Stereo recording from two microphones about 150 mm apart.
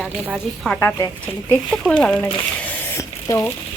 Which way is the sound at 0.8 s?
15° left (ahead or behind).